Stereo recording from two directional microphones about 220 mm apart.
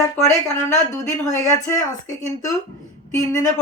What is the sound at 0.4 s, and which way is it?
A woman's voice, 15° left (ahead or behind).